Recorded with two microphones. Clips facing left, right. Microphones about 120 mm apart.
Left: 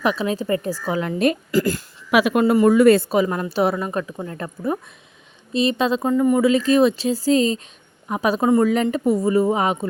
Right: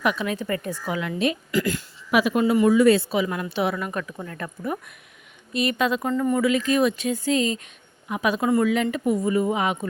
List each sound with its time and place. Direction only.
0.0 s speech: 30° left (ahead or behind)
2.0 s a woman's voice: 75° left (ahead or behind); by 6.1 s 30° left (ahead or behind)
6.1 s speech: 15° left (ahead or behind)
6.4 s a woman's voice: 30° left (ahead or behind)